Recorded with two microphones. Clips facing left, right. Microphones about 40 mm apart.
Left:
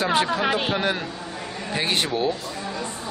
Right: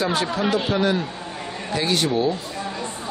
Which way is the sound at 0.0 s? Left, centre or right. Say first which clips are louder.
Left 1 dB; left.